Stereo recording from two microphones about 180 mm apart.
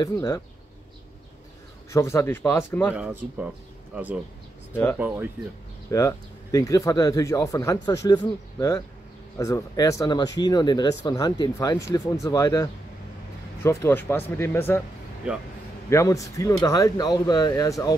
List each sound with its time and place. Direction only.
0.0 s speech: 20° left (ahead or behind)
1.9 s speech: 15° left (ahead or behind)
2.9 s a man's voice: 10° right (ahead or behind)
5.9 s speech: 20° left (ahead or behind)
15.2 s a man's voice: 5° right (ahead or behind)
15.9 s speech: 15° left (ahead or behind)